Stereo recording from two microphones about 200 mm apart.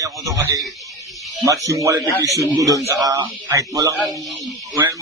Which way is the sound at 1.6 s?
15° right (ahead or behind).